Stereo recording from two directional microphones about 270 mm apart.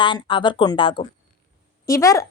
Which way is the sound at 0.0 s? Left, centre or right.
Centre.